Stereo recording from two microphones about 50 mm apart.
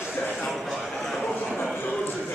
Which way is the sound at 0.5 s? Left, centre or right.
Centre.